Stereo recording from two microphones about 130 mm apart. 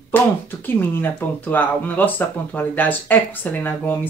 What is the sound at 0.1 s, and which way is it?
Speech, 15° left (ahead or behind).